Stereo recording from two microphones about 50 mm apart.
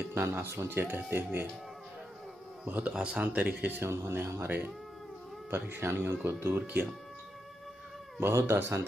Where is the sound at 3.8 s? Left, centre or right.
Right.